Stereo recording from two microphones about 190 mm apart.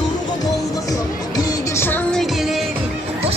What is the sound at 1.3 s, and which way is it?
Music, 15° left (ahead or behind).